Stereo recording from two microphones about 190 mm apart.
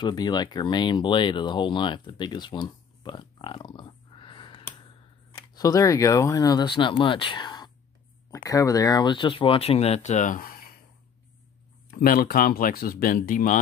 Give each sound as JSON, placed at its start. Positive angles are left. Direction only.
{"t": 0.0, "sound": "speech", "side_deg": 20}
{"t": 11.9, "sound": "speech", "side_deg": 50}